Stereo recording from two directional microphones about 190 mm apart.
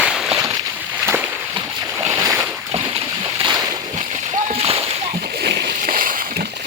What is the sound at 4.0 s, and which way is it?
Splash, 40° right (ahead or behind).